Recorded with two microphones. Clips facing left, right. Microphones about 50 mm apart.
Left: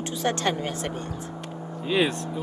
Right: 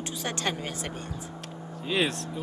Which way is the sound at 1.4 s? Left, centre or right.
Centre.